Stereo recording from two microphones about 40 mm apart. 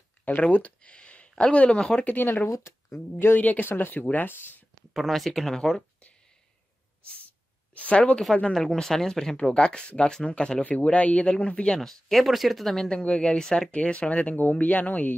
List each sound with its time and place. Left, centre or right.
0.4 s speech: left
0.9 s a sound: left
1.3 s speech: left
3.3 s speech: left
4.9 s speech: centre
5.5 s speech: centre
7.7 s a sound: left
8.5 s speech: centre
10.6 s speech: left
11.8 s speech: centre
12.9 s speech: left
14.3 s speech: left